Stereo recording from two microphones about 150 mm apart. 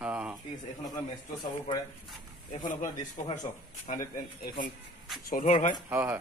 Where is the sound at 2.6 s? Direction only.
60° left (ahead or behind).